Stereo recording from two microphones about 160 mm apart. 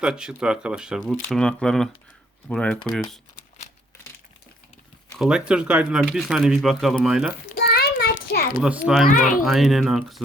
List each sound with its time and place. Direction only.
0.0 s speech: 5° right (ahead or behind)
5.1 s speech: 5° right (ahead or behind)
7.4 s a sound: 75° left (ahead or behind)
8.6 s speech: 5° right (ahead or behind)
9.0 s speech: 55° left (ahead or behind)
9.4 s speech: centre (ahead or behind)